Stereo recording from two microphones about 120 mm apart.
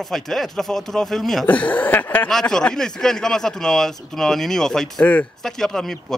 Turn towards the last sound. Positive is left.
turn(degrees=5)  # may be behind; listen again after turning